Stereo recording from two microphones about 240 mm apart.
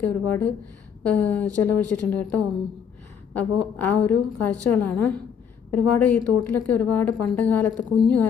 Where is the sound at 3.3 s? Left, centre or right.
Centre.